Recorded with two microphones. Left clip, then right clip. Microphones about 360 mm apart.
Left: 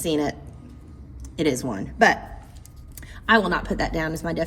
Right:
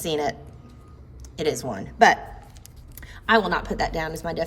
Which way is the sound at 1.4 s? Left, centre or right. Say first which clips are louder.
Left 2 dB; centre.